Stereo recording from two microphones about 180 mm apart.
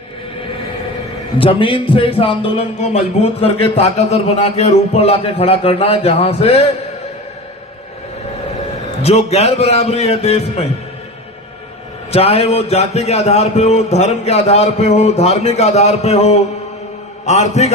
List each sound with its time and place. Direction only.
1.4 s a man's voice: 30° left (ahead or behind)
9.0 s a man's voice: 35° left (ahead or behind)
12.1 s a man's voice: 35° left (ahead or behind)